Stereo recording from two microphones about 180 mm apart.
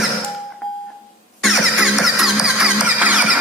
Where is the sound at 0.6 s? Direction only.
Centre (ahead or behind).